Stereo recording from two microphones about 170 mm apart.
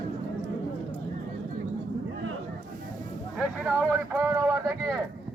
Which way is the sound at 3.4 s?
5° right (ahead or behind).